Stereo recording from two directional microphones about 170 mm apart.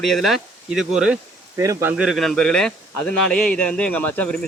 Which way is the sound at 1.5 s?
20° right (ahead or behind).